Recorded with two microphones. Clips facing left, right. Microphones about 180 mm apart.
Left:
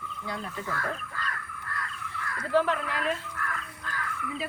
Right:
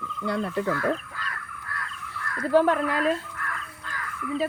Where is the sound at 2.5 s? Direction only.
45° right (ahead or behind).